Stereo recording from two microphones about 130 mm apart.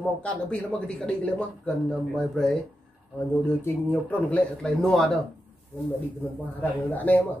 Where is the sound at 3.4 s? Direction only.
15° left (ahead or behind).